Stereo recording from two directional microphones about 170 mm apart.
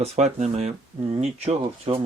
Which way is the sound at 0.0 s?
40° right (ahead or behind).